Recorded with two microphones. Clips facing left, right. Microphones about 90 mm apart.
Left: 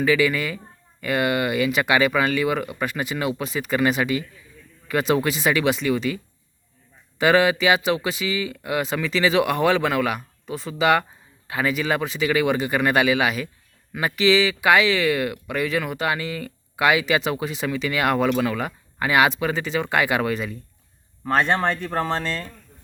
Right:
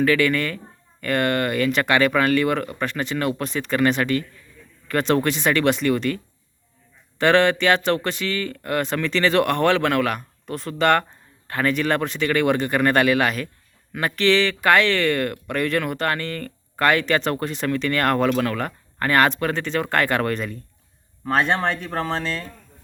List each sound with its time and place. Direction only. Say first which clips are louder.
0.0 s speech: right 1 dB; 5° left (ahead or behind)
7.2 s speech: right 1 dB; 5° left (ahead or behind)